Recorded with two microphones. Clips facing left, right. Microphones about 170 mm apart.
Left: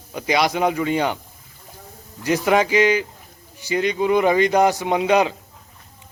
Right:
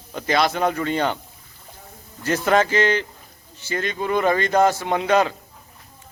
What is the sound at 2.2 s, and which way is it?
A man's voice, 10° left (ahead or behind).